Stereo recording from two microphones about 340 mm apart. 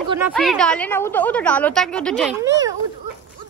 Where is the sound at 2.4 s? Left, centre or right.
Centre.